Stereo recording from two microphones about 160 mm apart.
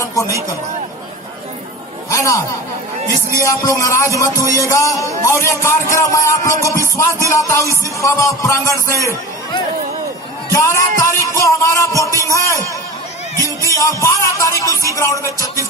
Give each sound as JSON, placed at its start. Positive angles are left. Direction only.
{"t": 0.0, "sound": "a sound", "side_deg": 20}
{"t": 2.0, "sound": "speech", "side_deg": 20}
{"t": 3.4, "sound": "music", "side_deg": 20}